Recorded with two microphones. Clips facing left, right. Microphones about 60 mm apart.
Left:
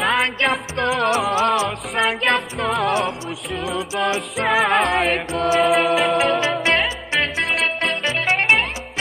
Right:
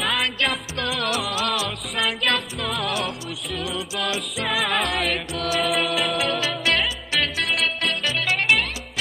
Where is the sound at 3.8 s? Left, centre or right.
Left.